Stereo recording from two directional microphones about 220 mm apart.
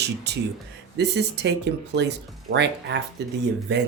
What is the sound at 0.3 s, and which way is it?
Speech, 50° right (ahead or behind).